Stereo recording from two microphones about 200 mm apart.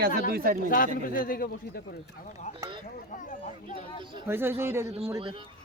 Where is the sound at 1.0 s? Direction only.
45° left (ahead or behind).